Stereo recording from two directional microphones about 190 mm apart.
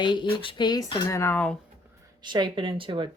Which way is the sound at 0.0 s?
25° left (ahead or behind).